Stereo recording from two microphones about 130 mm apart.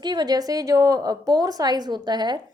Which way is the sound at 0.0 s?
35° right (ahead or behind).